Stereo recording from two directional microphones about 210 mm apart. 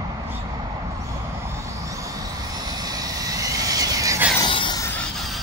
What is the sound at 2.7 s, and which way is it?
Vehicle, 20° right (ahead or behind).